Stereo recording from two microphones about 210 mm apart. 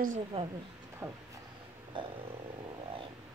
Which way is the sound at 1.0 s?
15° right (ahead or behind).